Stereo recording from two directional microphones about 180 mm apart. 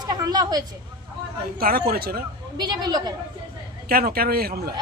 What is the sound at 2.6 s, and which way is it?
Speech, 25° right (ahead or behind).